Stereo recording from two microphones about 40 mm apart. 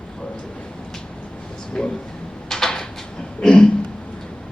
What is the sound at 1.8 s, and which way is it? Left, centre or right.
Speech, centre.